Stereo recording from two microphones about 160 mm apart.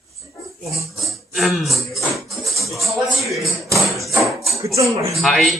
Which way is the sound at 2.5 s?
Centre (ahead or behind).